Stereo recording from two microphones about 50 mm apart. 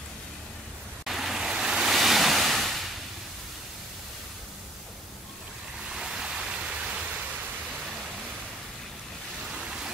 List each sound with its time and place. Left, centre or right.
1.0 s waves: centre
5.9 s waterfall: centre